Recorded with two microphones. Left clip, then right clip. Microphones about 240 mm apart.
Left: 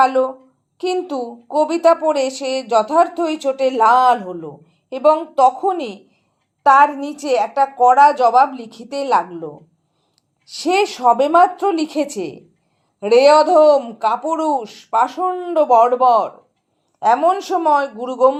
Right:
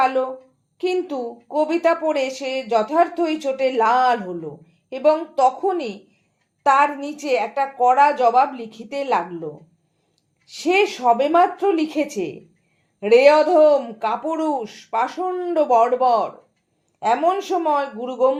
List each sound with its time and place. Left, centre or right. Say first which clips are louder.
0.0 s a woman's voice: left 5 dB; left